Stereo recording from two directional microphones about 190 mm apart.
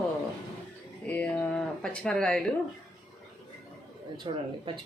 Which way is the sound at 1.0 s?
10° left (ahead or behind).